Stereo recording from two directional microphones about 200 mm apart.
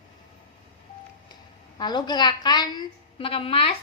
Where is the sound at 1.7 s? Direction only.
20° left (ahead or behind).